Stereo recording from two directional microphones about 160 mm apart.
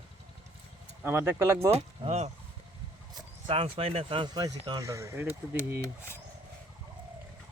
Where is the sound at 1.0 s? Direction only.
15° right (ahead or behind).